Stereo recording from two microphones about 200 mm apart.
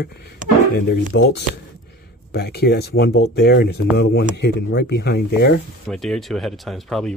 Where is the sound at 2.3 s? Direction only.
55° left (ahead or behind).